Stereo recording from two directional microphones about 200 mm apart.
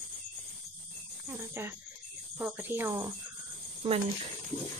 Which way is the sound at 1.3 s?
10° right (ahead or behind).